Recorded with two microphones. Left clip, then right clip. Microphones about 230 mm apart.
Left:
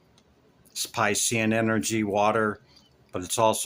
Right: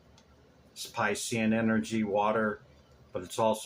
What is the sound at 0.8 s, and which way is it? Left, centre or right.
Speech, left.